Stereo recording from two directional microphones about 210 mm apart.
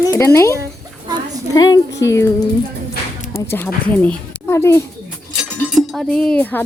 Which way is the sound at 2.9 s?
45° left (ahead or behind).